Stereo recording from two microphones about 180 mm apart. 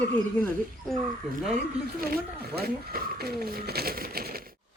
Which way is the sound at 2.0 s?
55° right (ahead or behind).